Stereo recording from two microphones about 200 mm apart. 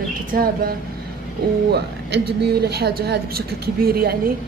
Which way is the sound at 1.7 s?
55° right (ahead or behind).